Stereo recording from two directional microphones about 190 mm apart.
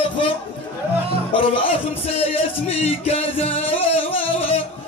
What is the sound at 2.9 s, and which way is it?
Music, 30° left (ahead or behind).